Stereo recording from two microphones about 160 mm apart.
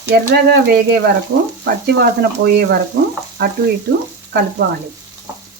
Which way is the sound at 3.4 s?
90° right.